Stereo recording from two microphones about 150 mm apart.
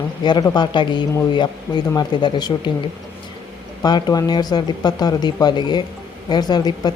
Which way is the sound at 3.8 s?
30° left (ahead or behind).